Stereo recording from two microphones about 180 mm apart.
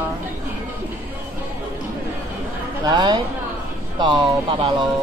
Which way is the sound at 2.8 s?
25° right (ahead or behind).